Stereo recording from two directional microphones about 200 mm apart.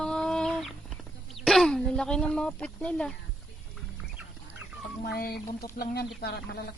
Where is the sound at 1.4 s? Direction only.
Centre (ahead or behind).